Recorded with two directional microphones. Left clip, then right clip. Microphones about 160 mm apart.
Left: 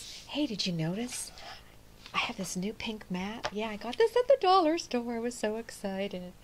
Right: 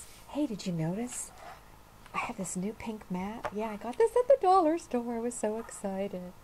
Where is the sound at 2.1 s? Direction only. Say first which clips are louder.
Left 3 dB; 5° left (ahead or behind).